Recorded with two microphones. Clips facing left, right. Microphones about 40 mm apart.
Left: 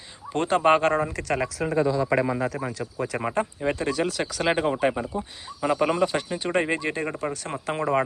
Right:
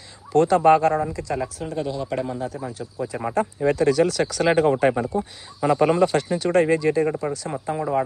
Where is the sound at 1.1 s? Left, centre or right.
Left.